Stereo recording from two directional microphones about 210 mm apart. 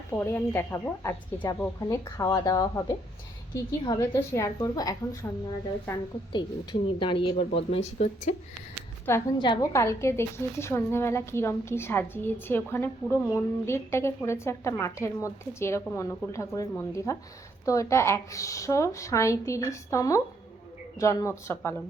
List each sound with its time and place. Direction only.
0.1 s a woman's voice: 10° left (ahead or behind)
6.3 s speech: 20° left (ahead or behind)
9.0 s a woman's voice: 15° left (ahead or behind)